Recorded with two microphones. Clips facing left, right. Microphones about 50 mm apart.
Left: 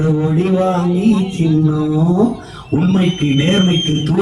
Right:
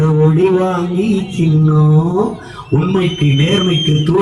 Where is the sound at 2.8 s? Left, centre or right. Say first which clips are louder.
Even; right.